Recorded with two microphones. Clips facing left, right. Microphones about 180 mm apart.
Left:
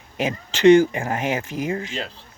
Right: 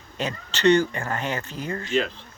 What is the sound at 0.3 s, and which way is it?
Speech, 90° left.